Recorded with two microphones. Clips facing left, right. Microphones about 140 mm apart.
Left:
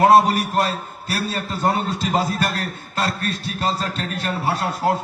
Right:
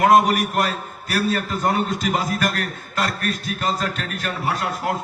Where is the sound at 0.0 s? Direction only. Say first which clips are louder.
Left 1 dB; 30° left (ahead or behind).